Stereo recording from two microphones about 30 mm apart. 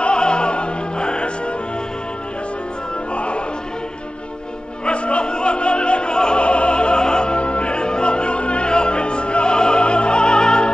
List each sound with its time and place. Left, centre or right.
0.0 s opera: left
3.2 s music: left
4.8 s opera: left